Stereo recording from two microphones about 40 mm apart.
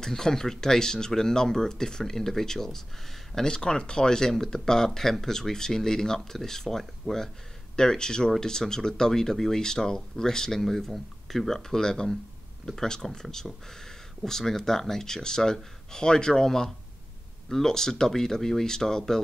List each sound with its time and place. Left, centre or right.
0.0 s speech: centre